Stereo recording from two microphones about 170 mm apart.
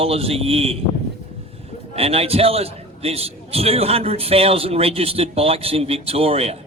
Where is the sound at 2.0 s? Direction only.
35° right (ahead or behind).